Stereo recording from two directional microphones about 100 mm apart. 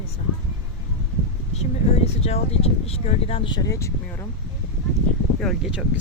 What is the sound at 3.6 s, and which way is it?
Speech, 30° left (ahead or behind).